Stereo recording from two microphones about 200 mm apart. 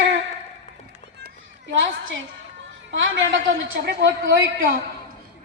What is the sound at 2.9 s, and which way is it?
A woman's voice, 65° right (ahead or behind).